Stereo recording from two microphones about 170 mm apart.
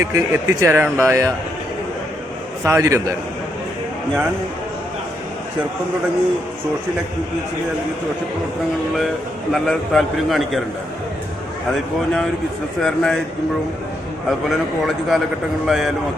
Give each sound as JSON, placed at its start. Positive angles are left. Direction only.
{"t": 0.0, "sound": "speech", "side_deg": -20}
{"t": 2.6, "sound": "speech", "side_deg": -15}
{"t": 9.5, "sound": "a man's voice", "side_deg": 0}
{"t": 12.8, "sound": "a man's voice", "side_deg": 5}
{"t": 14.3, "sound": "a man's voice", "side_deg": 0}